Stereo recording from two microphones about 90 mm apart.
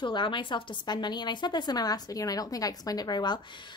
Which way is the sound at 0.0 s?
60° left (ahead or behind).